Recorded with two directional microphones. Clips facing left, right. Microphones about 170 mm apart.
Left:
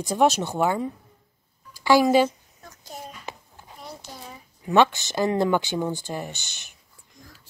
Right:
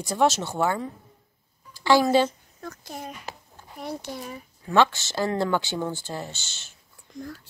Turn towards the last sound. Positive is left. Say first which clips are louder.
# left 2 dB
turn(degrees=15)  # may be behind; listen again after turning